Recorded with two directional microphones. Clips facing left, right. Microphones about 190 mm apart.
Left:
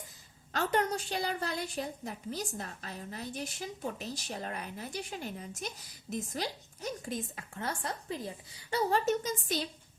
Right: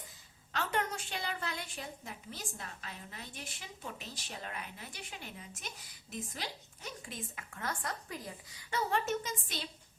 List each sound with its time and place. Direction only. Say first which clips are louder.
0.5 s a woman's voice: left 5 dB; 40° left (ahead or behind)
8.7 s a woman's voice: left 5 dB; 35° left (ahead or behind)